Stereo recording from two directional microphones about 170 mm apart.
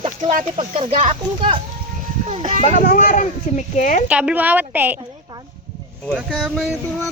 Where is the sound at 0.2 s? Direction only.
45° right (ahead or behind); by 1.5 s 30° right (ahead or behind).